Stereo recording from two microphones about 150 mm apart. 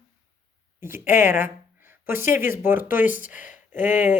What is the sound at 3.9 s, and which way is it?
Speech, 55° left (ahead or behind).